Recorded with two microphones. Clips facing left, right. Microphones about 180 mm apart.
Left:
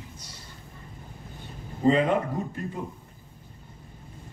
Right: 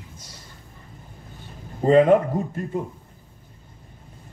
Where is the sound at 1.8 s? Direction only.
45° right (ahead or behind).